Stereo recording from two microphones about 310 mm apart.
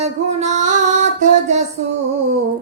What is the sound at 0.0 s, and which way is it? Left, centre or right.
Music, right.